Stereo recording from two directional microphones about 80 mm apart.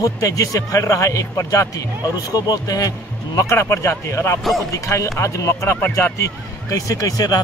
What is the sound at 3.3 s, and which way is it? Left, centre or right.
Speech, left.